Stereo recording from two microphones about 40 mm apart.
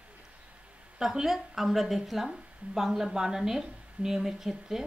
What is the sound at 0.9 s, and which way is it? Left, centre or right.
Speech, centre.